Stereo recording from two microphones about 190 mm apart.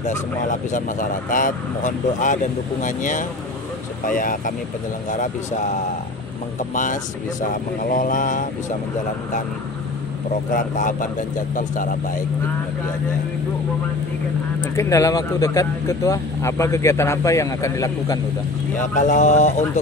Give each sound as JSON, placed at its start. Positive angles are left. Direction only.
{"t": 0.5, "sound": "speech", "side_deg": 45}
{"t": 6.7, "sound": "speech", "side_deg": 45}
{"t": 10.5, "sound": "speech", "side_deg": 45}
{"t": 14.6, "sound": "speech", "side_deg": 15}
{"t": 18.9, "sound": "speech", "side_deg": 40}